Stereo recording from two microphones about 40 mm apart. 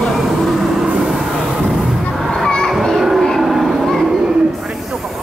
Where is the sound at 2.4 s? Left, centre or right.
Centre.